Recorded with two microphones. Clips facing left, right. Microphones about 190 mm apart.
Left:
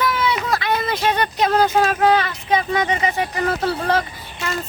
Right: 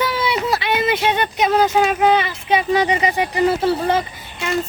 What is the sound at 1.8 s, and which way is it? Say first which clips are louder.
Speech: right 1 dB; 20° right (ahead or behind).